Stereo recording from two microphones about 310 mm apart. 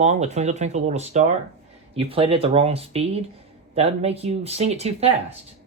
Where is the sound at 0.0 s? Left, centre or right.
Right.